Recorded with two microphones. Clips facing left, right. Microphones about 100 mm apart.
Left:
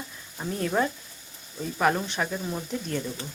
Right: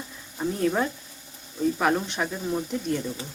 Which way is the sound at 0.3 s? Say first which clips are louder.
Right 2 dB; centre (ahead or behind).